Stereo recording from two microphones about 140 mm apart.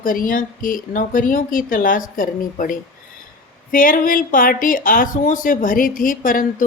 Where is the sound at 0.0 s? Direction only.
85° left.